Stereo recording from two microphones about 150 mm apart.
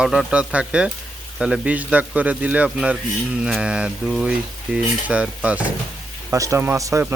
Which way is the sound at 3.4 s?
5° right (ahead or behind).